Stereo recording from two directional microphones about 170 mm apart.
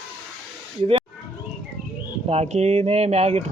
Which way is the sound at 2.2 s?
40° right (ahead or behind).